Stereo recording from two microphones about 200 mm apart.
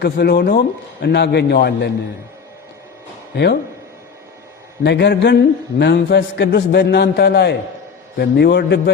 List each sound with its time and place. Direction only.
0.0 s a man's voice: 55° left (ahead or behind)
3.3 s a man's voice: 60° left (ahead or behind)
4.8 s a man's voice: 55° left (ahead or behind)